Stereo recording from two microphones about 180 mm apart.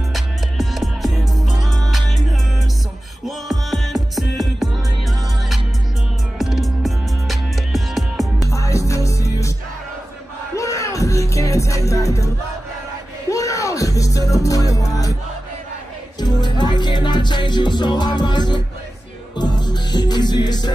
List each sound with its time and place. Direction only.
0.1 s music: centre (ahead or behind)
3.3 s music: centre (ahead or behind)
6.3 s music: centre (ahead or behind)
8.4 s music: 15° left (ahead or behind)
10.5 s music: 15° left (ahead or behind)
13.3 s music: 15° left (ahead or behind)
16.2 s music: 25° left (ahead or behind)